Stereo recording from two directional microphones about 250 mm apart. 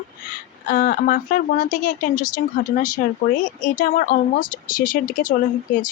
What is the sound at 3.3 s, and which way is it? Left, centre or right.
A woman's voice, left.